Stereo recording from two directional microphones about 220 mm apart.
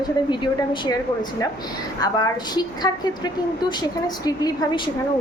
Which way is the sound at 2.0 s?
15° left (ahead or behind).